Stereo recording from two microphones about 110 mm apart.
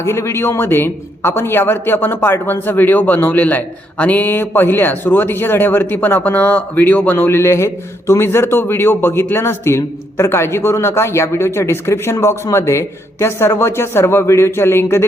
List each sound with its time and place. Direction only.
0.0 s a man's voice: 25° left (ahead or behind)